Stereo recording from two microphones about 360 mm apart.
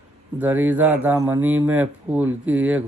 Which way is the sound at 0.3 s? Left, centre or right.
Centre.